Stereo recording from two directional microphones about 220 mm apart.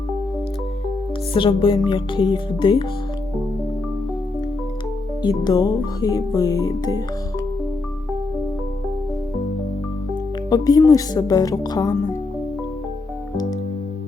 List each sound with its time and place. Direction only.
1.3 s music: 25° left (ahead or behind)
5.2 s speech: 20° left (ahead or behind)
10.5 s speech: 15° left (ahead or behind)